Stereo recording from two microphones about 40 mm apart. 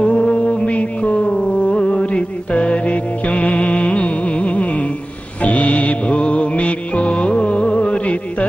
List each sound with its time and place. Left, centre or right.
0.0 s music: left